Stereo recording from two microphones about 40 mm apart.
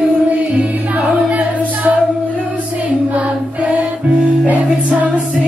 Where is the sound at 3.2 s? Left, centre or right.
Right.